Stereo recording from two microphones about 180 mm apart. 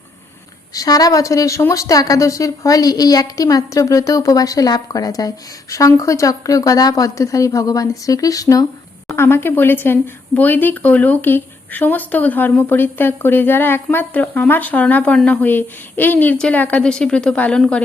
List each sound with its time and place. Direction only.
0.7 s a woman's voice: 20° left (ahead or behind)